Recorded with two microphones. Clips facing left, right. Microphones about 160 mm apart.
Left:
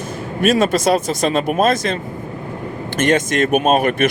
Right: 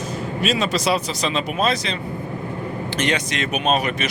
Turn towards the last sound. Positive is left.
turn(degrees=55)  # may be behind; listen again after turning